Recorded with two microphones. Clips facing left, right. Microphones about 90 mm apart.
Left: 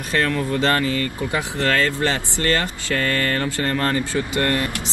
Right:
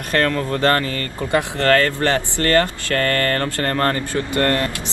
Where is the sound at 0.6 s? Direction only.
15° left (ahead or behind).